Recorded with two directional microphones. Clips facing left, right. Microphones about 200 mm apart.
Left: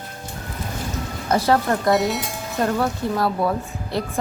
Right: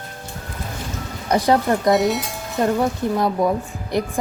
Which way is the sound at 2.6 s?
15° right (ahead or behind).